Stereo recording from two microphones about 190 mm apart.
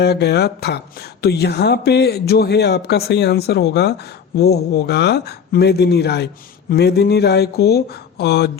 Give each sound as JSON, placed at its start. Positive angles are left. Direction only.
{"t": 0.0, "sound": "speech", "side_deg": 60}